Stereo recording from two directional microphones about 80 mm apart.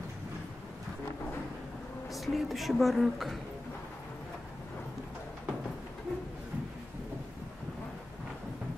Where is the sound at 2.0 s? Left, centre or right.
Centre.